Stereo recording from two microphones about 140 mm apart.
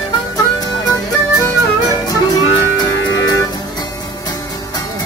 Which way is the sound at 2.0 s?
25° left (ahead or behind).